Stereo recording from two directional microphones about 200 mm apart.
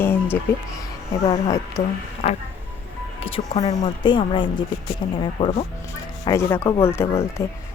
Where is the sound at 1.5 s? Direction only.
15° left (ahead or behind).